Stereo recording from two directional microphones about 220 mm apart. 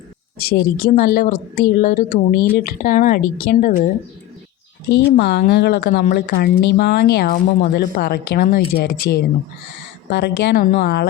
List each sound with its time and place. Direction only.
0.3 s a woman's voice: 45° left (ahead or behind)
4.9 s a woman's voice: 50° left (ahead or behind)